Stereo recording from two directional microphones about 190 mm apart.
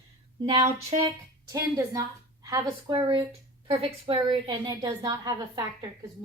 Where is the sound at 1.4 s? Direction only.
15° right (ahead or behind).